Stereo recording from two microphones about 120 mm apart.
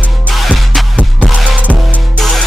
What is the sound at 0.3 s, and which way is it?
Music, centre (ahead or behind).